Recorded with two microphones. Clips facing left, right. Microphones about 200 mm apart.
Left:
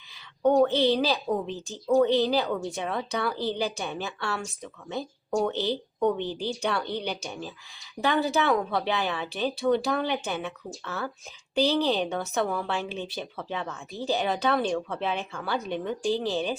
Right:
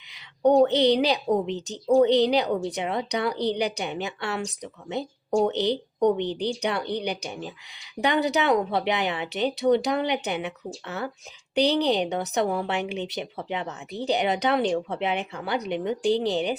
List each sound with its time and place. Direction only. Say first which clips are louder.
0.1 s speech: right 3 dB; 20° right (ahead or behind)